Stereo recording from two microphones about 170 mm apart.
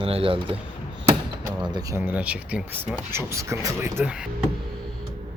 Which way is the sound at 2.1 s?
10° right (ahead or behind).